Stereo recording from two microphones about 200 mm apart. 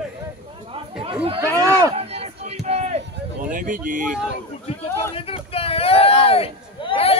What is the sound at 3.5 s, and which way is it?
Speech, 40° right (ahead or behind).